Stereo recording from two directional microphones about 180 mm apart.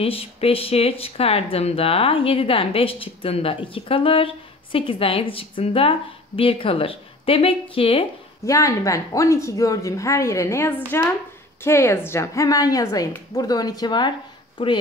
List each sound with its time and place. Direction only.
0.0 s speech: 35° left (ahead or behind)
8.5 s a woman's voice: 15° left (ahead or behind)